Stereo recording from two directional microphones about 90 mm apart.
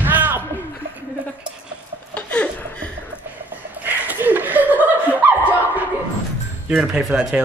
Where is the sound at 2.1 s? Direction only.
15° left (ahead or behind).